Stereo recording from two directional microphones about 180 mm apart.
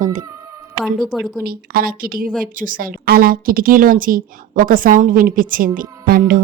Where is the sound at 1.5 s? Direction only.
55° right (ahead or behind).